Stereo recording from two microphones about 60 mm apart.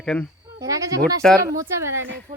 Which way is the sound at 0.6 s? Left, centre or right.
Right.